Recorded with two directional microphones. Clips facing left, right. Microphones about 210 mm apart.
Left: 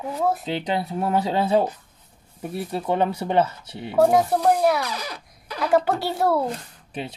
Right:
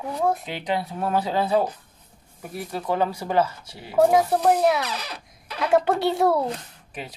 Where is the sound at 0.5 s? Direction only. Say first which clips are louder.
Left 2 dB; 25° left (ahead or behind).